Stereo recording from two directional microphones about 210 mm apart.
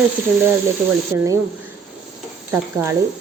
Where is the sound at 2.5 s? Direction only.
10° right (ahead or behind).